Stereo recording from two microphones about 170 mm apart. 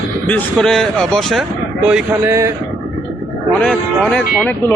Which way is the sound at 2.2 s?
15° right (ahead or behind).